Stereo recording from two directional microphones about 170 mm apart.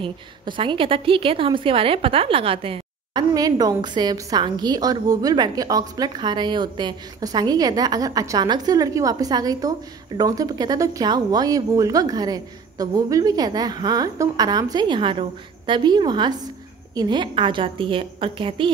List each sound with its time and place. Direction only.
0.0 s a woman's voice: 30° right (ahead or behind)